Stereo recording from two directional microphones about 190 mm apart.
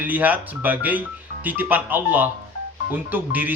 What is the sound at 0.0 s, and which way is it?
Speech, 10° right (ahead or behind).